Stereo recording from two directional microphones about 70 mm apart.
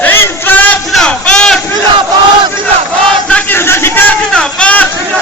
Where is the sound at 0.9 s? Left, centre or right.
Centre.